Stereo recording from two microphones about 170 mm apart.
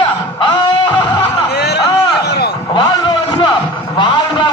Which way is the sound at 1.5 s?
75° left (ahead or behind).